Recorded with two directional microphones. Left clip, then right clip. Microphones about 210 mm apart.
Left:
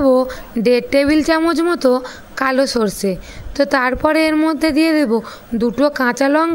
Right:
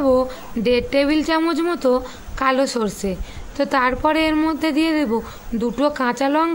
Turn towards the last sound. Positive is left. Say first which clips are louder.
# left 4 dB
turn(degrees=25)  # may be behind; listen again after turning